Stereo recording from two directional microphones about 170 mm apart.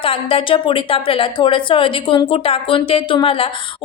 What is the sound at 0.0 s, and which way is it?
Speech, 35° left (ahead or behind).